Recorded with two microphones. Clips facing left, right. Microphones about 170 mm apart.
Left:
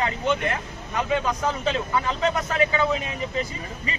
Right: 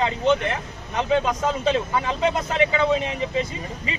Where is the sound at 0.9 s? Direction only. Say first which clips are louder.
Right 3 dB; 20° right (ahead or behind).